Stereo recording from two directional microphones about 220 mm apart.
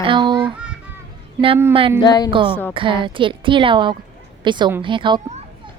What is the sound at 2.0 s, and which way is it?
Music, 20° left (ahead or behind).